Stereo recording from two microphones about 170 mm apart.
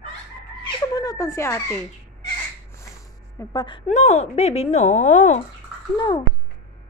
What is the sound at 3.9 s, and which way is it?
Speech, 40° left (ahead or behind).